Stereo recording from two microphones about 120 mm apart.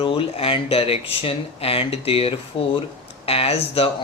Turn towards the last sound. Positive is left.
turn(degrees=55)  # may be behind; listen again after turning